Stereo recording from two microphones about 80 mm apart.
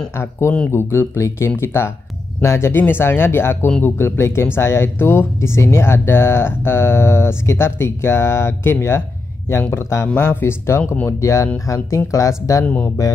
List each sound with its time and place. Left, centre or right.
0.2 s speech: left